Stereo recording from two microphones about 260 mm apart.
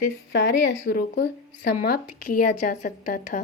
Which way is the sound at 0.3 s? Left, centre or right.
Left.